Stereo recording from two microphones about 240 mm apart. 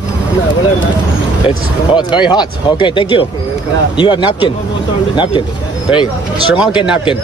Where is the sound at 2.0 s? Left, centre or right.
Centre.